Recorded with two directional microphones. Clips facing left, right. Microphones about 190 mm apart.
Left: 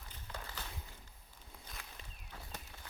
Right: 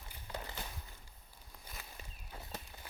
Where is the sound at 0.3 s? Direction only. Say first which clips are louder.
Right 4 dB; 20° right (ahead or behind).